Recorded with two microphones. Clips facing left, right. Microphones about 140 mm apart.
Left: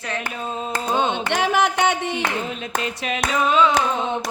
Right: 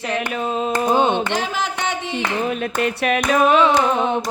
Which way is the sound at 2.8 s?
60° right (ahead or behind).